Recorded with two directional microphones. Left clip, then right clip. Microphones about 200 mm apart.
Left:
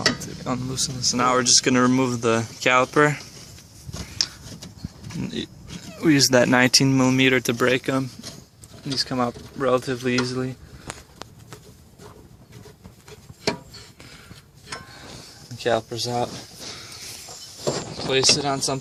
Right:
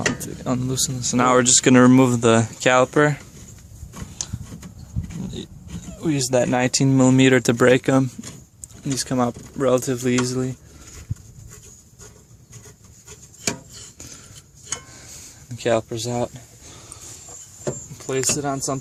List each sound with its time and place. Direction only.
0.4 s speech: 40° right (ahead or behind); by 3.2 s 20° right (ahead or behind)
6.0 s speech: 15° left (ahead or behind); by 6.9 s 5° right (ahead or behind)
6.9 s speech: 25° right (ahead or behind); by 10.5 s 50° right (ahead or behind)
15.5 s speech: 45° right (ahead or behind)
18.1 s speech: 30° right (ahead or behind)